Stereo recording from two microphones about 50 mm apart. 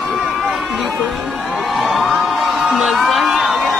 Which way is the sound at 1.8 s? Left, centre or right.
Centre.